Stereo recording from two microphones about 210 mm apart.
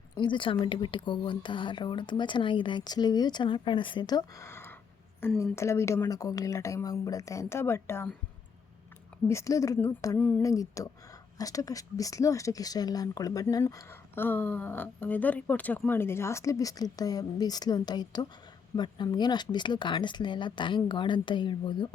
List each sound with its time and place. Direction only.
0.2 s a woman's voice: 25° left (ahead or behind)
9.2 s a woman's voice: 15° left (ahead or behind)